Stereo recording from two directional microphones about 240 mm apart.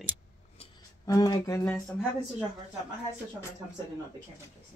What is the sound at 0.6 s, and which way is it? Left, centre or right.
Music, left.